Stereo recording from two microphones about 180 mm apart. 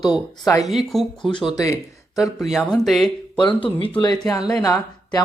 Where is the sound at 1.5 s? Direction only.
20° left (ahead or behind).